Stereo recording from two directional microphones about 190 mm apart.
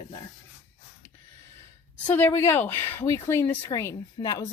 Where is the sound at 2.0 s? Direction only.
10° left (ahead or behind).